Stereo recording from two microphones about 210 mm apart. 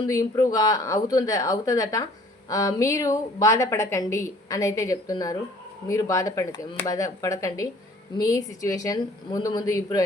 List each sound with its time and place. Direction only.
0.1 s a woman's voice: 15° left (ahead or behind)